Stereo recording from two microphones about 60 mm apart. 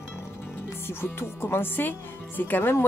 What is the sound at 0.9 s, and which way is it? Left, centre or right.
Speech, left.